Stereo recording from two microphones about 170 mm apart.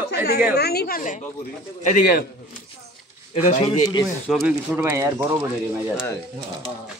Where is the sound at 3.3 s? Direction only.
45° left (ahead or behind).